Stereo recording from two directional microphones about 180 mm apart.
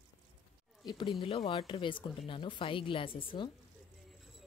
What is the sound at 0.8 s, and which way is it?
Speech, 25° left (ahead or behind).